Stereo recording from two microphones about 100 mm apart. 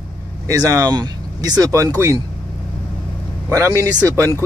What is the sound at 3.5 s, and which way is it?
Speech, 30° right (ahead or behind).